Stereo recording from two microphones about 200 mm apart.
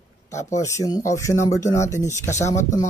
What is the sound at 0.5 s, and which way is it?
Speech, 15° left (ahead or behind).